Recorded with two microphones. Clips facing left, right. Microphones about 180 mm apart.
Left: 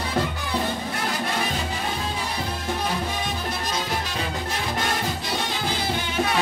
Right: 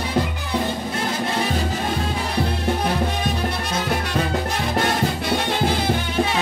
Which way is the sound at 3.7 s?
60° right (ahead or behind).